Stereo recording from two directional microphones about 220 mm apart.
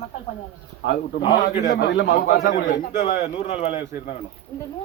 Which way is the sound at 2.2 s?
35° left (ahead or behind).